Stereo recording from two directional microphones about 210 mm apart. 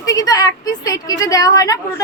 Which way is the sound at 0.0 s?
15° left (ahead or behind).